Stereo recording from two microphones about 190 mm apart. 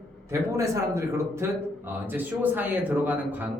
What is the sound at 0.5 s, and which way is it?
A man's voice, 15° right (ahead or behind).